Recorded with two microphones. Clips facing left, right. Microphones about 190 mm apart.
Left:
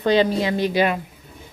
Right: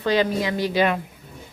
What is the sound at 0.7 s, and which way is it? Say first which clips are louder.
Speech: right 2 dB; 10° left (ahead or behind).